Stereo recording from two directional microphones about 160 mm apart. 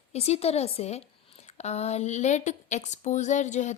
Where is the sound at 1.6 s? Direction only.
45° left (ahead or behind).